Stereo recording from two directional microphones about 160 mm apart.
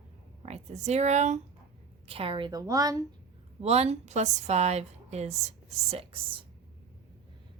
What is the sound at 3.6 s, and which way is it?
A woman's voice, 40° right (ahead or behind).